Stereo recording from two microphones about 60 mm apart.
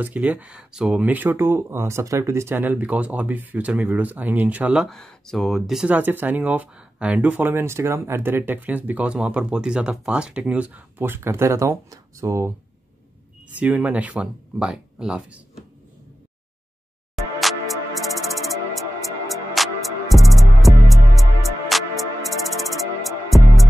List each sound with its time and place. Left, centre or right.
0.0 s speech: right
0.7 s speech: centre
1.0 s speech: right
2.5 s speech: right
4.8 s speech: centre
5.9 s speech: right
7.5 s speech: right
11.0 s speech: right
13.6 s speech: right
17.1 s music: centre